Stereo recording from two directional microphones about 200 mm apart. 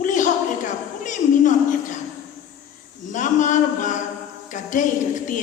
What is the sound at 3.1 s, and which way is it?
A woman's voice, 40° left (ahead or behind).